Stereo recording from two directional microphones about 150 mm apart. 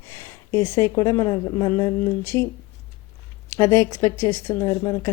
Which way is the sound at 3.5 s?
15° left (ahead or behind).